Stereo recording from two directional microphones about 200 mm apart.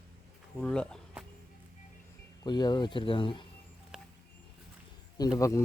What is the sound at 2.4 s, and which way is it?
Speech, 20° left (ahead or behind).